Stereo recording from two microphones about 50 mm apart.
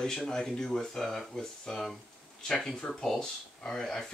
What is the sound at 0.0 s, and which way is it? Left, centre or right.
Speech, centre.